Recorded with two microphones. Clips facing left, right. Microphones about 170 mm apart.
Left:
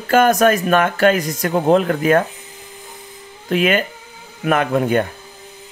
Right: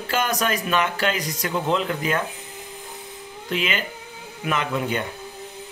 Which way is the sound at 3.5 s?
50° left (ahead or behind).